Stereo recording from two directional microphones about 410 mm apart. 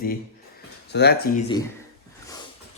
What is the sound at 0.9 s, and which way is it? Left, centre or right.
Speech, left.